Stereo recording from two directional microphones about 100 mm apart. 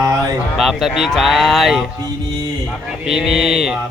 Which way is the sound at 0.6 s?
Centre (ahead or behind).